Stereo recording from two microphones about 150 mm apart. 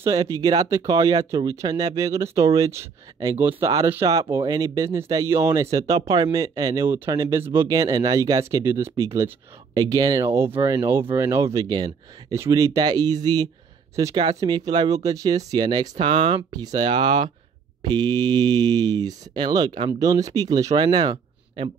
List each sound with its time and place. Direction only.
0.0 s speech: 25° right (ahead or behind)
4.0 s speech: 35° right (ahead or behind)